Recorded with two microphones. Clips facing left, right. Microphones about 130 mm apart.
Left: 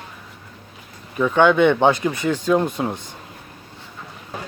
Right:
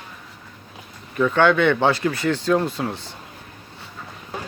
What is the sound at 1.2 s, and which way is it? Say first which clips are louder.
Speech: left 2 dB; 15° left (ahead or behind).